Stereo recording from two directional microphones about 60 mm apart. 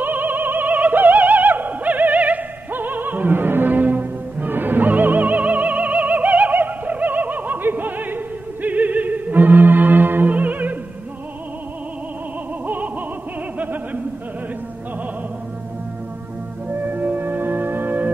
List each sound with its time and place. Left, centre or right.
0.0 s opera: right
8.6 s music: right
12.6 s a sound: right
16.6 s music: right